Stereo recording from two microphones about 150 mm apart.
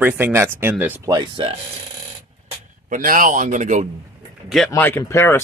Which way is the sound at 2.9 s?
65° right (ahead or behind).